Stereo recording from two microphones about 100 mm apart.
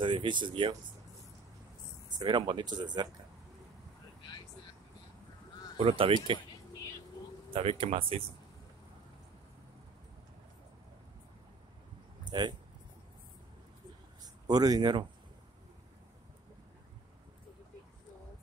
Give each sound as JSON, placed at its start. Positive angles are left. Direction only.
{"t": 0.0, "sound": "speech", "side_deg": -55}
{"t": 2.1, "sound": "speech", "side_deg": -50}
{"t": 5.8, "sound": "speech", "side_deg": -70}
{"t": 7.5, "sound": "speech", "side_deg": -65}
{"t": 12.3, "sound": "speech", "side_deg": -50}
{"t": 14.2, "sound": "speech", "side_deg": -40}